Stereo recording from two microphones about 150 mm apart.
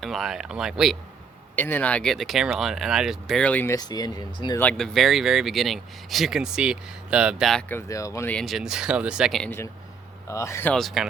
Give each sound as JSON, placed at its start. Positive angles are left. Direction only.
{"t": 0.0, "sound": "speech", "side_deg": 0}
{"t": 1.5, "sound": "speech", "side_deg": 15}
{"t": 3.8, "sound": "speech", "side_deg": 25}
{"t": 4.8, "sound": "speech", "side_deg": 0}
{"t": 7.7, "sound": "speech", "side_deg": 20}
{"t": 8.3, "sound": "speech", "side_deg": 0}
{"t": 10.2, "sound": "speech", "side_deg": 20}
{"t": 10.8, "sound": "speech", "side_deg": 0}